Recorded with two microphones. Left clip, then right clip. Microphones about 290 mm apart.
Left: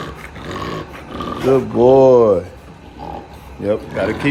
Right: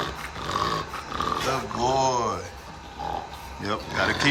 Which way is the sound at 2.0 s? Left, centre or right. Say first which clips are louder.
Left 14 dB; centre.